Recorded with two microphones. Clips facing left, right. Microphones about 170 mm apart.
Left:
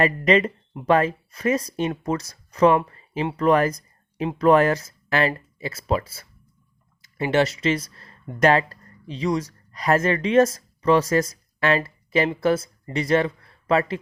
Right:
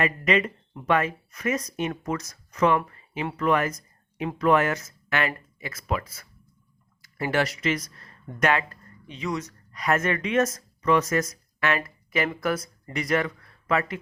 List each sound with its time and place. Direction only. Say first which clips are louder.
0.0 s speech: left 5 dB; 35° left (ahead or behind)